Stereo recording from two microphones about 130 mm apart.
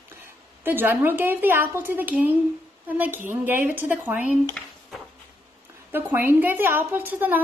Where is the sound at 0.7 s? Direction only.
15° right (ahead or behind).